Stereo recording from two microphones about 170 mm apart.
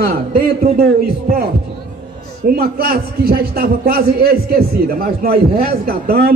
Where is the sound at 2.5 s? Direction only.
60° right (ahead or behind).